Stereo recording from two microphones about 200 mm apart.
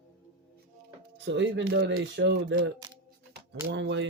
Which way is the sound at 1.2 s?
60° right (ahead or behind).